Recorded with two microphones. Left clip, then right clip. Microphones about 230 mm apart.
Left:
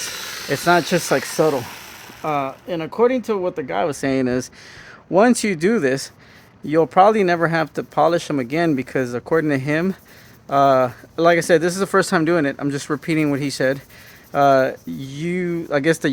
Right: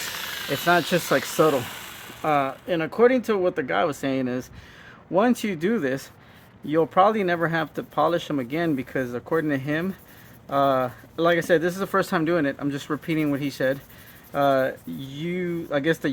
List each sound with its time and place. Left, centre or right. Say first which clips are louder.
0.5 s speech: left 4 dB; left
1.4 s speech: left 2 dB; centre; by 16.0 s left